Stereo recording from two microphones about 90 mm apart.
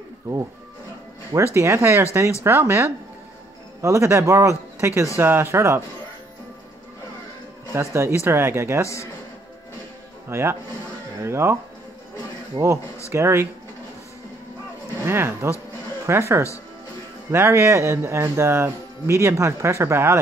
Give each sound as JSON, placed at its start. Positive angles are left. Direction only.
{"t": 1.4, "sound": "speech", "side_deg": -30}
{"t": 7.7, "sound": "speech", "side_deg": -30}
{"t": 8.8, "sound": "a man's voice", "side_deg": 35}
{"t": 10.3, "sound": "speech", "side_deg": -30}
{"t": 12.6, "sound": "speech", "side_deg": -55}
{"t": 13.1, "sound": "speech", "side_deg": -30}
{"t": 15.0, "sound": "speech", "side_deg": -30}